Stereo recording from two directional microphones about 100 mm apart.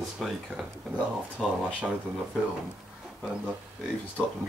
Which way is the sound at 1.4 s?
5° left (ahead or behind).